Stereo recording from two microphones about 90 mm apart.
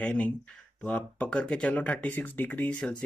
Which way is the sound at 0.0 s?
15° left (ahead or behind).